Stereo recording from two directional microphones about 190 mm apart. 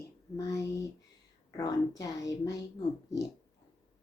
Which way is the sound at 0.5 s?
15° left (ahead or behind).